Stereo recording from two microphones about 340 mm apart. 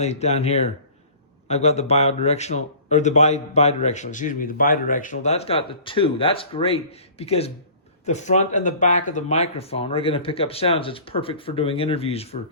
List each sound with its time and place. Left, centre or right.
0.0 s speech: centre